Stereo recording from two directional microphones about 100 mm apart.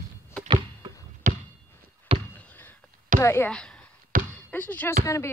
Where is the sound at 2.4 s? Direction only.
20° left (ahead or behind).